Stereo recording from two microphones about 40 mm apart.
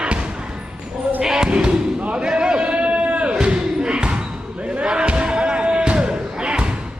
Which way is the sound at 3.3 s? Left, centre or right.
Right.